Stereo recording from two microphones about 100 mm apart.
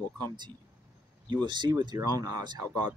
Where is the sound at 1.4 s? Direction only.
50° right (ahead or behind).